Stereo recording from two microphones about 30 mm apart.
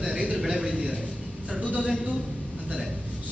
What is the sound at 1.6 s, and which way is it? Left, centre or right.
Speech, right.